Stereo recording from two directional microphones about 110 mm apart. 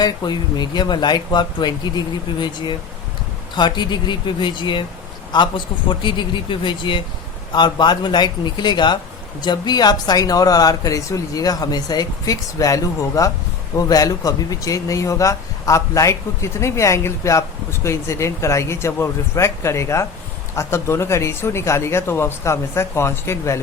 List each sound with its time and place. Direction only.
0.0 s speech: 40° left (ahead or behind); by 23.6 s 25° left (ahead or behind)